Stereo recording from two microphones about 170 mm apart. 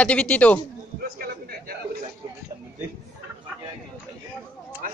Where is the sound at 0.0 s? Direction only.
10° left (ahead or behind).